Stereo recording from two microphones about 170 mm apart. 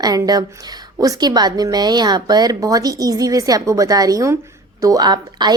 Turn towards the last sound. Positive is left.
turn(degrees=-25)  # may be behind; listen again after turning